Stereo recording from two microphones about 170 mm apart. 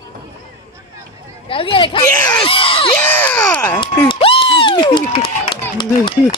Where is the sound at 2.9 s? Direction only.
10° left (ahead or behind).